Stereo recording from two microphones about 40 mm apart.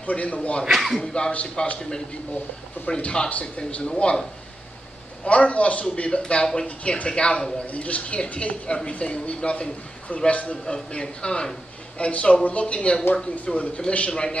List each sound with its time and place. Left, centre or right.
0.0 s speech: left
0.7 s speech: centre
1.0 s a man's voice: left
1.3 s speech: left
3.0 s speech: left
5.2 s a man's voice: left